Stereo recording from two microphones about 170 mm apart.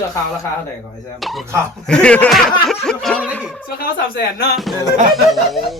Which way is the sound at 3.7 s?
65° left (ahead or behind).